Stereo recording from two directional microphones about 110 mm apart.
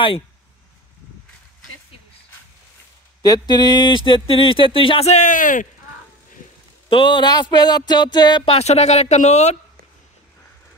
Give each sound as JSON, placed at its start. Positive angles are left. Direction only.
{"t": 3.2, "sound": "speech", "side_deg": 35}
{"t": 6.9, "sound": "music", "side_deg": 45}
{"t": 8.5, "sound": "speech", "side_deg": 75}